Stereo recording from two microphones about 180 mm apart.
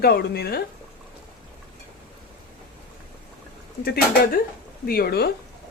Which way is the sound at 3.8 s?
55° left (ahead or behind).